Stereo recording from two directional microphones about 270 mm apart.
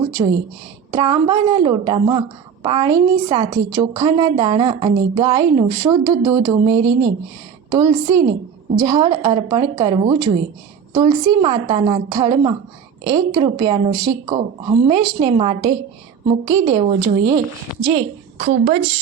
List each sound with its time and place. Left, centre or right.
0.2 s a woman's voice: centre